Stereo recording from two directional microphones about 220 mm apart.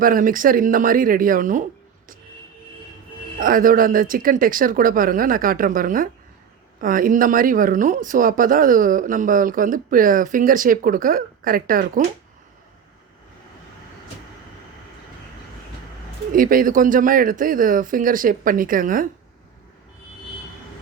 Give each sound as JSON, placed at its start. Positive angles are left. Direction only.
{"t": 0.0, "sound": "speech", "side_deg": -40}
{"t": 3.4, "sound": "speech", "side_deg": -40}
{"t": 16.3, "sound": "speech", "side_deg": -40}